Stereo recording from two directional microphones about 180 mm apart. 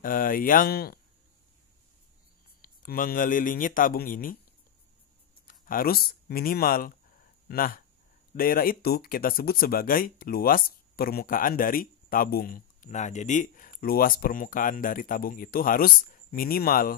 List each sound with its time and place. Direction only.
0.0 s speech: 50° left (ahead or behind)
2.6 s speech: 50° left (ahead or behind)
5.5 s speech: 50° left (ahead or behind)